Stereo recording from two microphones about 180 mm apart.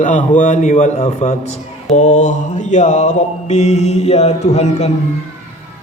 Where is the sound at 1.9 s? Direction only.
40° left (ahead or behind).